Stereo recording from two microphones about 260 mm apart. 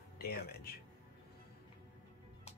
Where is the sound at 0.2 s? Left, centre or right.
Left.